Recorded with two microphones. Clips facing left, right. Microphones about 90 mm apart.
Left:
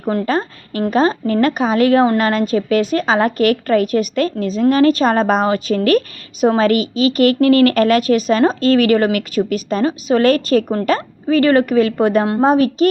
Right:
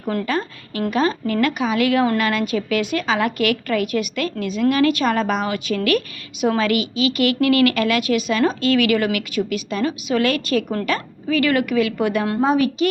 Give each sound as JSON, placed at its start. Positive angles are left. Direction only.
{"t": 0.0, "sound": "a woman's voice", "side_deg": 30}